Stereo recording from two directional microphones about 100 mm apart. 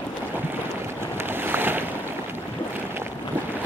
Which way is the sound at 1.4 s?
20° right (ahead or behind).